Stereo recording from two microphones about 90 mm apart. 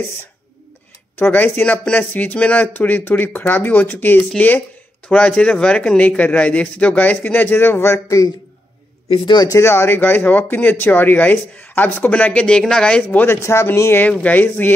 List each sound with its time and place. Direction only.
1.1 s speech: 20° left (ahead or behind); by 8.3 s 35° left (ahead or behind)
9.1 s speech: 65° left (ahead or behind)
9.6 s speech: 30° left (ahead or behind)
13.4 s speech: 30° left (ahead or behind)